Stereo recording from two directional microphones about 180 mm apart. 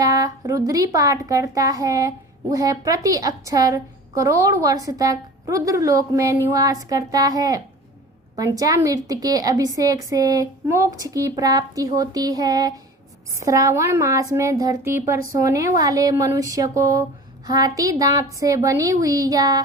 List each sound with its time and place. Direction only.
0.0 s speech: 20° right (ahead or behind)